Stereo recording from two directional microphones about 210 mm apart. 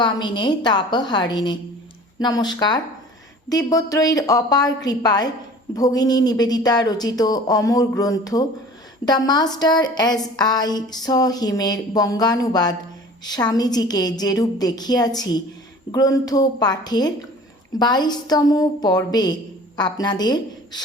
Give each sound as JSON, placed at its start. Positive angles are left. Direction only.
{"t": 0.0, "sound": "speech", "side_deg": 20}